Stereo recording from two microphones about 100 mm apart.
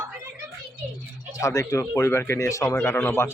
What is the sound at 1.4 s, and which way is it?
Speech, 35° left (ahead or behind).